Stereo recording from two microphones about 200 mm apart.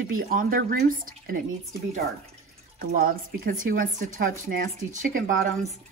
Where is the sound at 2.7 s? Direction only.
45° right (ahead or behind).